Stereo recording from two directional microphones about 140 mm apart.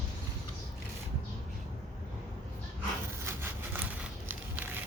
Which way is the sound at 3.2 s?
15° right (ahead or behind).